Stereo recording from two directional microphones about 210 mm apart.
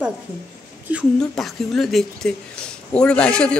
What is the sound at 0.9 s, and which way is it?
A man's voice, centre (ahead or behind).